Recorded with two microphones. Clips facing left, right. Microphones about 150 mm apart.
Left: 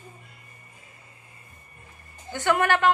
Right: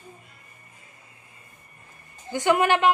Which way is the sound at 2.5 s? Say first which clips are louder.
Right 1 dB; 15° right (ahead or behind).